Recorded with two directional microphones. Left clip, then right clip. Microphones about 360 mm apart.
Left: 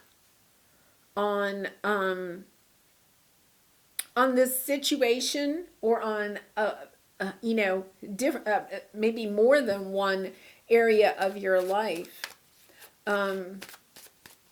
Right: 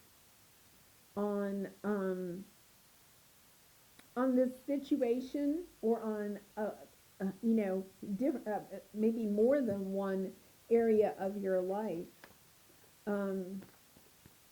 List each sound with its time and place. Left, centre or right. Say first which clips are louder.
1.1 s speech: left 9 dB; centre
3.9 s speech: left 9 dB; centre
9.2 s speech: left 9 dB; centre
12.2 s a sound: left 18 dB; centre
13.1 s speech: left 10 dB; centre